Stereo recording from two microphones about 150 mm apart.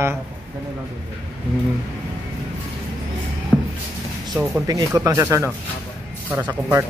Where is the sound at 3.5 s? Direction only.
10° left (ahead or behind).